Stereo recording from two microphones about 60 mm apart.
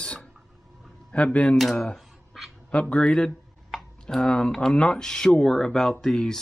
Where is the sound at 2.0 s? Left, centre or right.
Centre.